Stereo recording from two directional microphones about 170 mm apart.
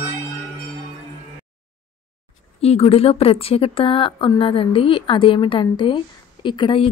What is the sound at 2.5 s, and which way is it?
A woman's voice, 35° left (ahead or behind).